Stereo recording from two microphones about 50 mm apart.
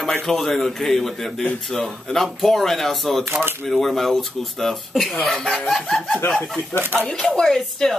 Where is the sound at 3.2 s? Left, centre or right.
Right.